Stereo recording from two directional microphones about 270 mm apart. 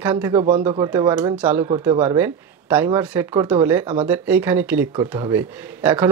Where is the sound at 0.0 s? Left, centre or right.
Centre.